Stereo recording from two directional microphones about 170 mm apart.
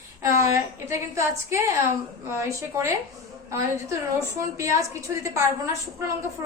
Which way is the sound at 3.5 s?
20° right (ahead or behind).